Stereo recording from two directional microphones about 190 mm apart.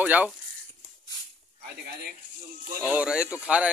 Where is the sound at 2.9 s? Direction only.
5° right (ahead or behind).